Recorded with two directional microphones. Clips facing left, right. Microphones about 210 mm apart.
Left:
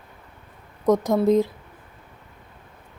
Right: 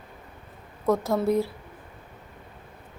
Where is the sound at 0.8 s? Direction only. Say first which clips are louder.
Left 5 dB; 15° left (ahead or behind).